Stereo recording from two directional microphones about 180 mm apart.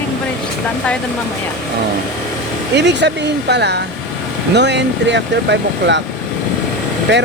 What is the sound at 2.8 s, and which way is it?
Speech, 75° right (ahead or behind).